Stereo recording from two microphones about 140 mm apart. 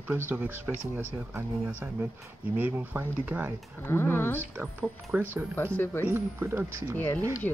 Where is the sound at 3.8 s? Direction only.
15° left (ahead or behind).